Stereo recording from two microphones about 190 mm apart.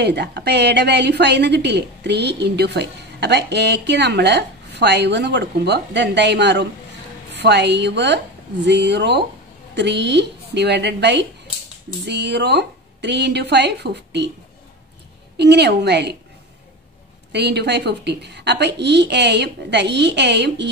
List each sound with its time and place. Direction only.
0.0 s a woman's voice: 60° right (ahead or behind)
15.3 s a woman's voice: 60° right (ahead or behind)
17.3 s a woman's voice: 60° right (ahead or behind)